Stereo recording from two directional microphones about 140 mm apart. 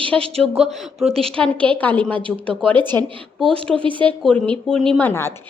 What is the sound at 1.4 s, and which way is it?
Speech, 10° left (ahead or behind).